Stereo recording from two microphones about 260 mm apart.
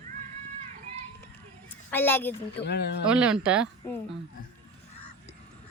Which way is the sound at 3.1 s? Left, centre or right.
Centre.